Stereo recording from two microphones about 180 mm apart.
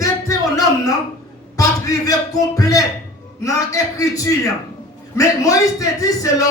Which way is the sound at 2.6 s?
20° left (ahead or behind).